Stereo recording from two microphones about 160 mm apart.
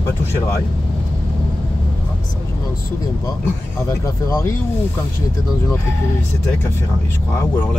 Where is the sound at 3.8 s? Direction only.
20° left (ahead or behind).